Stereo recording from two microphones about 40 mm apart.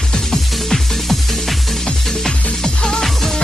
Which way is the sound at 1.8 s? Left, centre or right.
Centre.